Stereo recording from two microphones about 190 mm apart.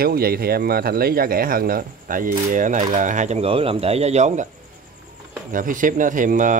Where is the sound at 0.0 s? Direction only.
55° right (ahead or behind); by 4.5 s 40° right (ahead or behind).